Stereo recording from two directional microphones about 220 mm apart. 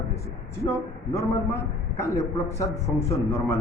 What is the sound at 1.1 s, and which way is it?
A man's voice, 10° left (ahead or behind).